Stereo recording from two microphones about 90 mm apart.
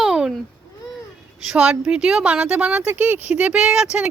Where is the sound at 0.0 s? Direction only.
5° right (ahead or behind).